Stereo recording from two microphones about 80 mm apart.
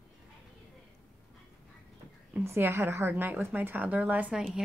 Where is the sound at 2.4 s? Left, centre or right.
Right.